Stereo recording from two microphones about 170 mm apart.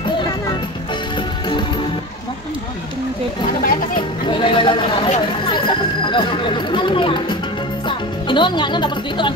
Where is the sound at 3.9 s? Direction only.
30° left (ahead or behind).